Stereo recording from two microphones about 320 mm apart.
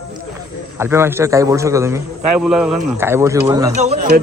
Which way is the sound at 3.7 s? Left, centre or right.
Right.